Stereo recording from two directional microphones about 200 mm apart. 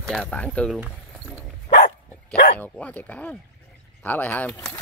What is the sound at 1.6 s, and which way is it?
Dog, 40° left (ahead or behind).